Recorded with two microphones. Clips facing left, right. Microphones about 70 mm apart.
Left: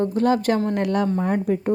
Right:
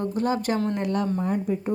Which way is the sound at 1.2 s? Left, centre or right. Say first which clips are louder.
Left 4 dB; left.